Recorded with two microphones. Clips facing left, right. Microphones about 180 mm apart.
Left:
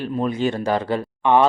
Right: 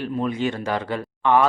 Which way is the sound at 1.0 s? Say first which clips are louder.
Right 1 dB; 20° left (ahead or behind).